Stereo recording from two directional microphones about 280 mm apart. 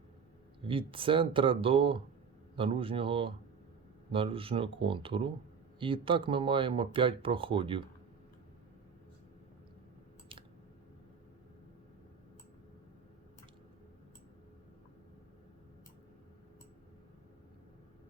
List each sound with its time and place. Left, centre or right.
0.7 s speech: centre